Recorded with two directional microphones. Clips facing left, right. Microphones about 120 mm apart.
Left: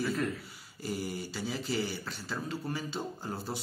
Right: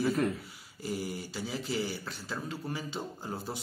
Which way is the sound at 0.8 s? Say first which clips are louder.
Even; 15° right (ahead or behind).